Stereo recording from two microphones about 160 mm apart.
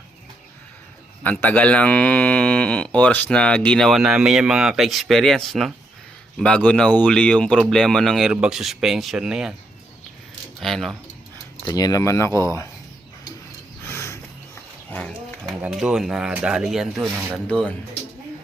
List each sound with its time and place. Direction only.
1.2 s speech: 10° left (ahead or behind)
10.6 s speech: centre (ahead or behind)
11.6 s speech: 25° left (ahead or behind)
13.8 s a sound: 15° left (ahead or behind)
15.4 s speech: 5° right (ahead or behind)